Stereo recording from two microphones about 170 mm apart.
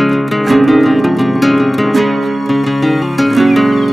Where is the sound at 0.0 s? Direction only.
Centre (ahead or behind).